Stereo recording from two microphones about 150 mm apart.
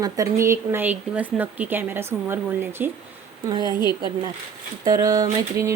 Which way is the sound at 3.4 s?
25° right (ahead or behind).